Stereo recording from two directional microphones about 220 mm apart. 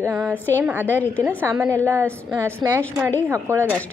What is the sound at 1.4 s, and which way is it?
Speech, 10° right (ahead or behind).